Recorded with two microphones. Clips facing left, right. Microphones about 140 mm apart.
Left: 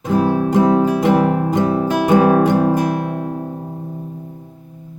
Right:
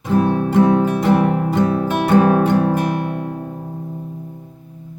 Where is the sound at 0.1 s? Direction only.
10° left (ahead or behind).